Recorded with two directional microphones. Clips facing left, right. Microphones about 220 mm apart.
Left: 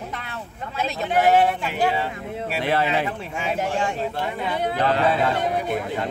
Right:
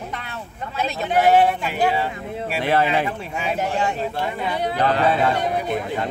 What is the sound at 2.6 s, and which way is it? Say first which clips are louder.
Speech: right 3 dB; 50° right (ahead or behind).